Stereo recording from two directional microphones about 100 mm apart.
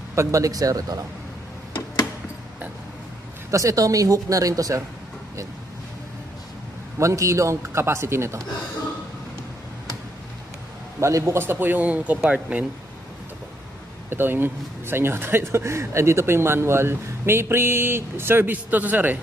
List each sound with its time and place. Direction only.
0.1 s speech: 30° right (ahead or behind)
3.5 s speech: 35° right (ahead or behind)
7.0 s speech: 30° right (ahead or behind)
11.0 s speech: 30° right (ahead or behind); by 12.6 s 15° right (ahead or behind)
14.1 s speech: 20° right (ahead or behind)